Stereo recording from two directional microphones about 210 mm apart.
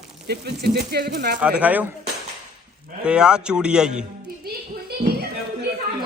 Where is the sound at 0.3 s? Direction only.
50° right (ahead or behind).